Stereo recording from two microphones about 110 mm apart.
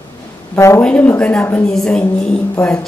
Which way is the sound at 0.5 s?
25° left (ahead or behind).